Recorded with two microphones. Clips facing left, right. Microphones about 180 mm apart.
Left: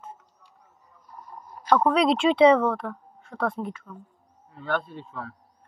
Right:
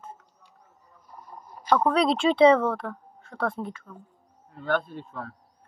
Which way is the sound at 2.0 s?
35° right (ahead or behind).